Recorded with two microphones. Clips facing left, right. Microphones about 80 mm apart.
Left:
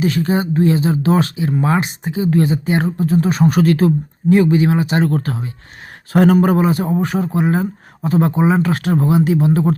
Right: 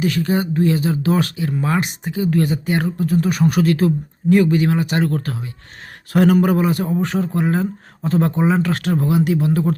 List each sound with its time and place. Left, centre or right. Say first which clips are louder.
0.0 s speech: left 2 dB; left
3.6 s speech: left 3 dB; left
4.3 s speech: left 2 dB; left